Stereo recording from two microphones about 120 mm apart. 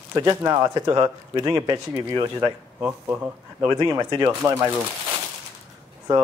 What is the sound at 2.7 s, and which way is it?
Speech, 10° right (ahead or behind).